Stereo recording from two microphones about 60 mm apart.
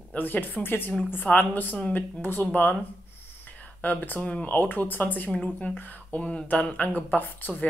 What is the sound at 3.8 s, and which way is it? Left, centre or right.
Speech, left.